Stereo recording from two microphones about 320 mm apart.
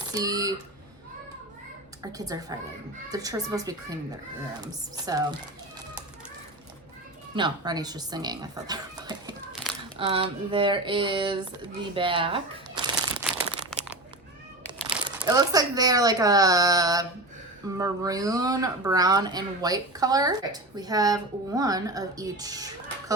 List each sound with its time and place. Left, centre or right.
0.1 s speech: centre
2.0 s speech: centre
7.3 s speech: centre
9.5 s crumpling: centre
10.0 s speech: centre
15.0 s speech: centre